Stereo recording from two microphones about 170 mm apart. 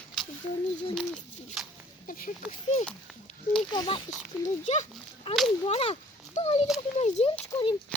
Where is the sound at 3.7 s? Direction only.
25° left (ahead or behind).